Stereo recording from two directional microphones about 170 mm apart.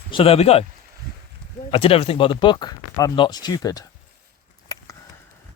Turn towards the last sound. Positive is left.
turn(degrees=20)  # may be behind; listen again after turning